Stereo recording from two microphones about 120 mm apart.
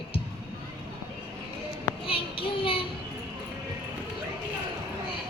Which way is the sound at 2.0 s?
50° left (ahead or behind).